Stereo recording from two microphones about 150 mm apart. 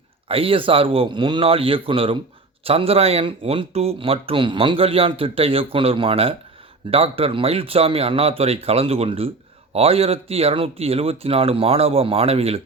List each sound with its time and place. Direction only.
0.3 s speech: 40° right (ahead or behind)